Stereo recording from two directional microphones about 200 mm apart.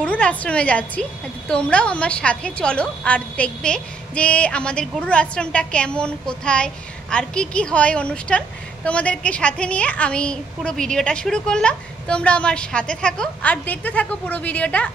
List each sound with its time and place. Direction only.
0.0 s a woman's voice: 5° left (ahead or behind)